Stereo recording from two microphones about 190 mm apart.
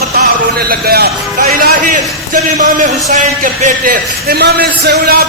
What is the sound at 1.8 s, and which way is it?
A man's voice, 40° right (ahead or behind).